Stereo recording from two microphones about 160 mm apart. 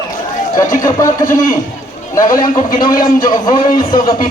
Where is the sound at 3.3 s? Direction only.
25° left (ahead or behind).